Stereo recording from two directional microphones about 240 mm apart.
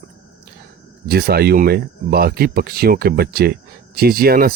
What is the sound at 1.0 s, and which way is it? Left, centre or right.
Speech, right.